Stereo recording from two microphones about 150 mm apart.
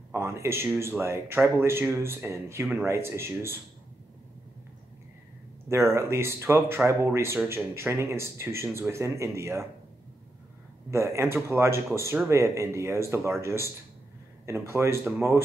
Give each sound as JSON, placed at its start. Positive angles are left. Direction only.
{"t": 0.1, "sound": "speech", "side_deg": -20}
{"t": 5.9, "sound": "speech", "side_deg": -20}
{"t": 10.9, "sound": "speech", "side_deg": -20}